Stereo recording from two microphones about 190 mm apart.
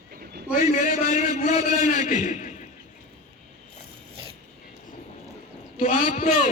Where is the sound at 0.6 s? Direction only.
45° left (ahead or behind).